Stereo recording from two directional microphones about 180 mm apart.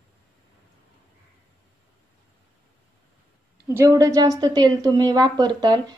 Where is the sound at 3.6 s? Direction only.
15° right (ahead or behind).